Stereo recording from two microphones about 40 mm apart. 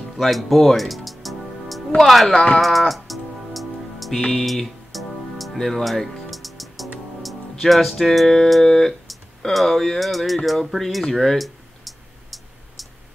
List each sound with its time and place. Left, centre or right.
0.2 s music: centre
2.0 s speech: centre
2.6 s music: centre
9.5 s speech: centre